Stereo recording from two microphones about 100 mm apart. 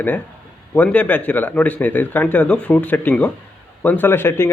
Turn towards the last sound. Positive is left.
turn(degrees=25)  # may be behind; listen again after turning